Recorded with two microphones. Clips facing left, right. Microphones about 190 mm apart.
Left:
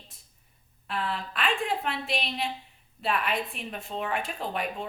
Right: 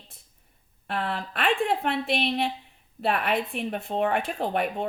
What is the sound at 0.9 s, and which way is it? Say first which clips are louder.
A woman's voice: right 2 dB; 60° right (ahead or behind).